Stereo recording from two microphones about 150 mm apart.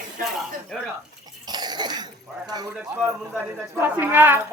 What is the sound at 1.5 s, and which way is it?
Cough, 30° right (ahead or behind).